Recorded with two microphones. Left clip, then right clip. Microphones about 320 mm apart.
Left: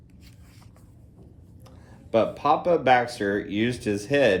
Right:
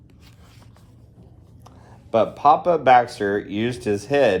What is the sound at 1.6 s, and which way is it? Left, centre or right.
Speech, centre.